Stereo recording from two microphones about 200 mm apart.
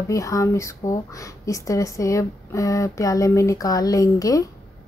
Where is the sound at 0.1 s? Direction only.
15° left (ahead or behind).